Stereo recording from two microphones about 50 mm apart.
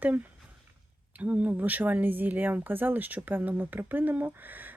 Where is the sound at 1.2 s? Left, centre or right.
Right.